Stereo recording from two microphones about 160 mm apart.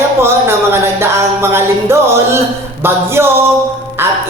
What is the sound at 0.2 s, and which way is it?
Music, 15° right (ahead or behind).